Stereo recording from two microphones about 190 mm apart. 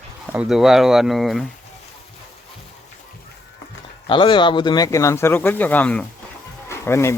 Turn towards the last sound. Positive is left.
turn(degrees=15)  # may be behind; listen again after turning